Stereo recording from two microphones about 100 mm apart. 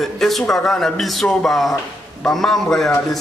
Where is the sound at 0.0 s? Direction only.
Centre (ahead or behind).